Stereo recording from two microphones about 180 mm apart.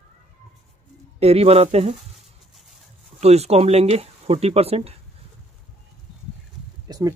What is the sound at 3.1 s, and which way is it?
Speech, 35° right (ahead or behind).